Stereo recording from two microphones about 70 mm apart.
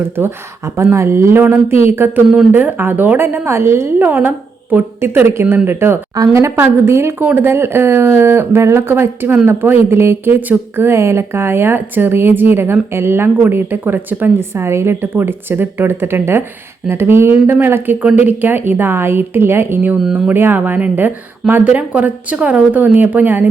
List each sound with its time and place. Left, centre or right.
0.2 s a woman's voice: right
3.9 s a woman's voice: right
6.1 s a woman's voice: right